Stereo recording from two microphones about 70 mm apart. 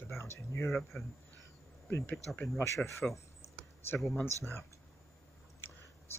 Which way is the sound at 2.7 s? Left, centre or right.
Left.